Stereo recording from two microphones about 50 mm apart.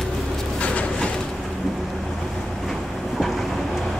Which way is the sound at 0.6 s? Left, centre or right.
Left.